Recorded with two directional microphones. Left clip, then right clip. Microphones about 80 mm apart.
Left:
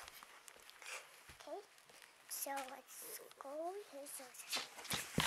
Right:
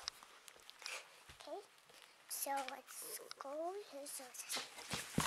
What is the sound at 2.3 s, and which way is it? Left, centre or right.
Speech, centre.